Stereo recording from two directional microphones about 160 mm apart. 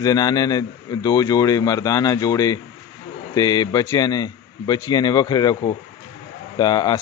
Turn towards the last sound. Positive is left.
turn(degrees=25)  # may be behind; listen again after turning